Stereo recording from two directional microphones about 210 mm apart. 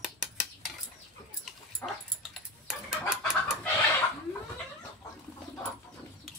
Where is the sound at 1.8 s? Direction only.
10° left (ahead or behind).